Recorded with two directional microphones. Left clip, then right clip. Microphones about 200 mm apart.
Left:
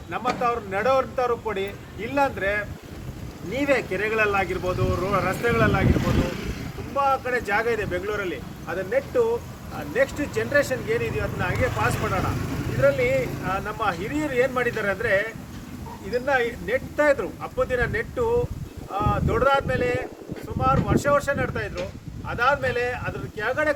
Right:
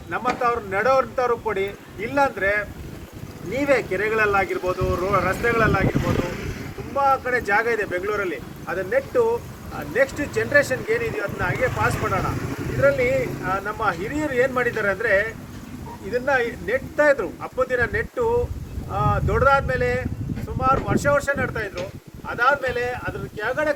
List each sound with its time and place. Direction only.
0.1 s speech: 20° left (ahead or behind)
6.9 s speech: 15° left (ahead or behind)